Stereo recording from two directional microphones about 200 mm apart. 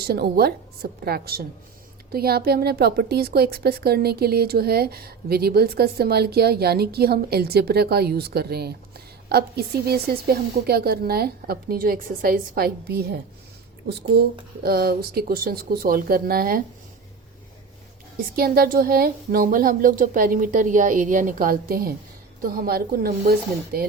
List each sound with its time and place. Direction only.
0.0 s a woman's voice: 50° right (ahead or behind)
14.6 s a woman's voice: 50° right (ahead or behind)
18.3 s a woman's voice: 50° right (ahead or behind)